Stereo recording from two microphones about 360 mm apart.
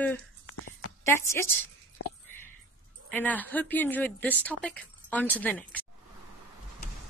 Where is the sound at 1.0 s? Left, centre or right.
Centre.